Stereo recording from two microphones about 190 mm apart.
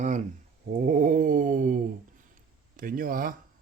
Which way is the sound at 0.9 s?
45° right (ahead or behind).